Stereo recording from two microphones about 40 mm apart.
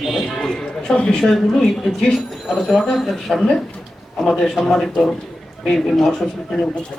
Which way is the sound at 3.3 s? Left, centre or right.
Centre.